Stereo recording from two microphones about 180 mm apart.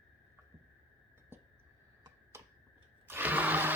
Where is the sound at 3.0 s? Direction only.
10° right (ahead or behind).